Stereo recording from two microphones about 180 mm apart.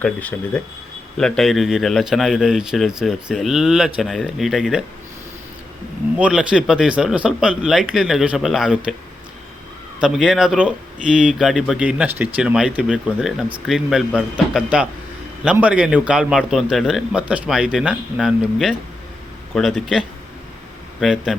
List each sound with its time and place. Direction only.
0.0 s speech: 10° left (ahead or behind)
6.1 s speech: 5° right (ahead or behind)
10.0 s a man's voice: 5° right (ahead or behind)